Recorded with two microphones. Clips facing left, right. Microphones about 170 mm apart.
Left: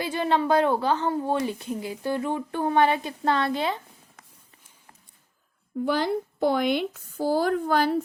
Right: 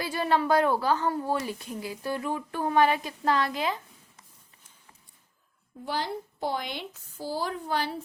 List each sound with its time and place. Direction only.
0.0 s a woman's voice: 25° left (ahead or behind)
5.8 s speech: 55° left (ahead or behind)